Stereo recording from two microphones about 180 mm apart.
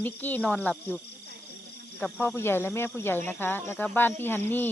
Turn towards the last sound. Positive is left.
turn(degrees=10)  # may be behind; listen again after turning